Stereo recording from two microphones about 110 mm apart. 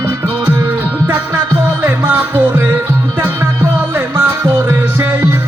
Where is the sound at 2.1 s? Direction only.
15° right (ahead or behind).